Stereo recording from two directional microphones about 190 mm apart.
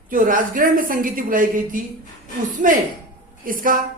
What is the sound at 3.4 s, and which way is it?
Speech, 45° right (ahead or behind).